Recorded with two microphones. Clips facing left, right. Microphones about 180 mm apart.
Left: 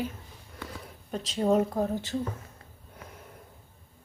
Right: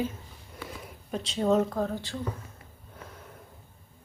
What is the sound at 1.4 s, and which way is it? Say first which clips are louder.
Speech: even; 10° left (ahead or behind).